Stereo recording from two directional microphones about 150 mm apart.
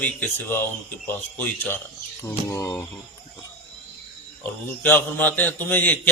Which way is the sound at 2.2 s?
20° left (ahead or behind).